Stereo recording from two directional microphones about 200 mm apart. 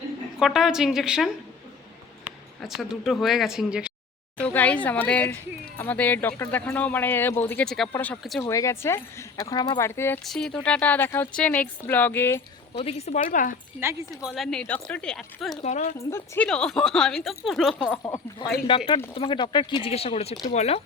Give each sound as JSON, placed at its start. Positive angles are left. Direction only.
{"t": 0.3, "sound": "speech", "side_deg": 0}
{"t": 2.6, "sound": "speech", "side_deg": 0}
{"t": 4.4, "sound": "speech", "side_deg": 5}
{"t": 8.4, "sound": "speech", "side_deg": 15}
{"t": 12.7, "sound": "speech", "side_deg": 30}
{"t": 14.3, "sound": "speech", "side_deg": 0}
{"t": 15.6, "sound": "speech", "side_deg": 35}
{"t": 16.0, "sound": "speech", "side_deg": 15}
{"t": 18.0, "sound": "speech", "side_deg": 15}